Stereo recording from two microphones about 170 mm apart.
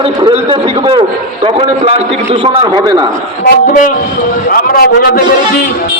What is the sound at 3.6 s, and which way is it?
A man's voice, 50° left (ahead or behind).